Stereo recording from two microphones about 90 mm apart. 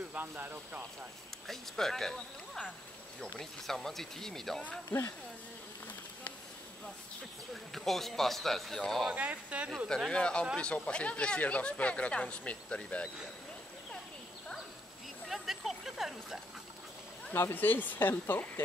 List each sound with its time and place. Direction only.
0.1 s speech: 20° right (ahead or behind)
1.5 s speech: 5° left (ahead or behind)
7.7 s speech: 5° left (ahead or behind)
9.1 s speech: 15° right (ahead or behind)
9.8 s speech: 5° left (ahead or behind)
15.2 s a sound: centre (ahead or behind)
17.3 s speech: 25° left (ahead or behind)